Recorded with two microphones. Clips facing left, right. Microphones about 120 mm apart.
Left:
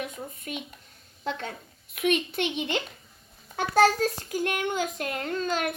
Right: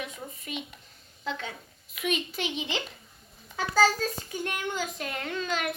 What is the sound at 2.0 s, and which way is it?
Speech, 55° left (ahead or behind).